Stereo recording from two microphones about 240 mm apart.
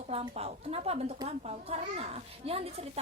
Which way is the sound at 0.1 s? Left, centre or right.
Right.